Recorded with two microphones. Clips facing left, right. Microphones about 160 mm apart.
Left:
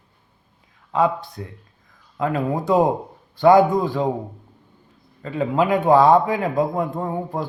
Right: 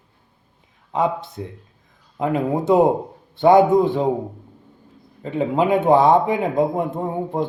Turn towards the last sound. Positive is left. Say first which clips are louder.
# right 2 dB
turn(degrees=-20)  # may be behind; listen again after turning